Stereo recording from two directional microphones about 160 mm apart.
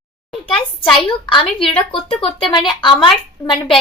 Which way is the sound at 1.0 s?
30° left (ahead or behind).